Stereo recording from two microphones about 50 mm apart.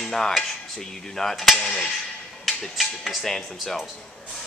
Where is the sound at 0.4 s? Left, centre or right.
Centre.